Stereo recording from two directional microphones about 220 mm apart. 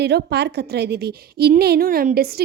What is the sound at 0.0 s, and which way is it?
A woman's voice, 50° right (ahead or behind).